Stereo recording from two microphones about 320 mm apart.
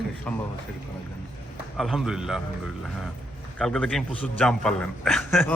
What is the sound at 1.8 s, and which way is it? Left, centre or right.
Speech, centre.